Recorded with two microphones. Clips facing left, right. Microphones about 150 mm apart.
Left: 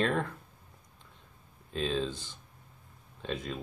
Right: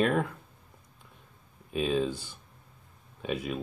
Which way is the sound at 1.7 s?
10° right (ahead or behind).